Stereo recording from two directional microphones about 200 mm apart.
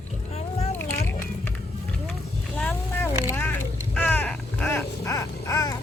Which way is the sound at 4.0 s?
10° left (ahead or behind).